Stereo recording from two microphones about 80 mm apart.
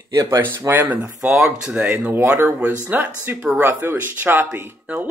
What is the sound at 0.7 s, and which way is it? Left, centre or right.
Speech, right.